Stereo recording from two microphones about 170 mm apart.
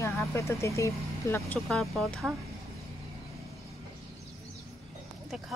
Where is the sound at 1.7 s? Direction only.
Centre (ahead or behind).